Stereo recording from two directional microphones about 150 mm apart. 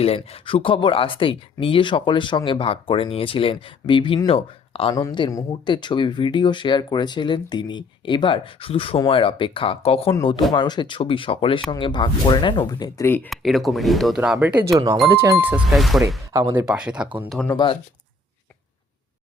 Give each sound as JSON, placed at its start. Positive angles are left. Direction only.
{"t": 0.0, "sound": "speech", "side_deg": 40}
{"t": 4.9, "sound": "speech", "side_deg": 25}
{"t": 13.1, "sound": "speech", "side_deg": 15}
{"t": 13.3, "sound": "speech", "side_deg": 0}
{"t": 14.2, "sound": "speech", "side_deg": -10}
{"t": 14.7, "sound": "speech", "side_deg": -25}
{"t": 15.7, "sound": "speech", "side_deg": 0}
{"t": 16.3, "sound": "speech", "side_deg": -25}
{"t": 16.6, "sound": "speech", "side_deg": -5}
{"t": 17.5, "sound": "speech", "side_deg": 30}